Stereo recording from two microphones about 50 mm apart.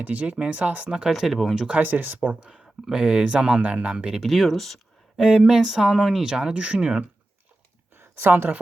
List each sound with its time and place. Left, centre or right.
0.0 s speech: right
0.9 s speech: centre
1.1 s speech: centre
1.8 s speech: right
2.4 s speech: centre
4.1 s speech: centre
5.2 s speech: centre
6.4 s speech: right
7.9 s a sound: right